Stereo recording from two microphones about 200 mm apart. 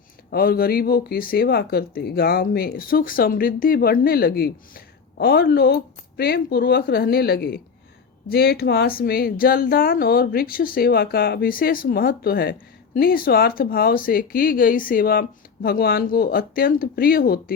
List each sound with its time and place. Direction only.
0.3 s speech: 50° left (ahead or behind)